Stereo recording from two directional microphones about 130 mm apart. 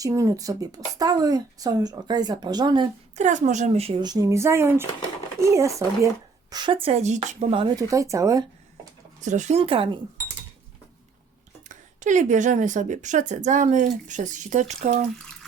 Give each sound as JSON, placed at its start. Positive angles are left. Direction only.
{"t": 0.0, "sound": "speech", "side_deg": -25}
{"t": 3.2, "sound": "speech", "side_deg": -65}
{"t": 4.0, "sound": "speech", "side_deg": -30}
{"t": 6.5, "sound": "a woman's voice", "side_deg": -35}
{"t": 6.8, "sound": "speech", "side_deg": -60}
{"t": 7.8, "sound": "speech", "side_deg": -25}
{"t": 9.2, "sound": "a woman's voice", "side_deg": -70}
{"t": 9.6, "sound": "speech", "side_deg": -45}
{"t": 11.7, "sound": "a woman's voice", "side_deg": -70}